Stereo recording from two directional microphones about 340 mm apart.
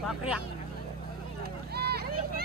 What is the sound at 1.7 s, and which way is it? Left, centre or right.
Vehicle, right.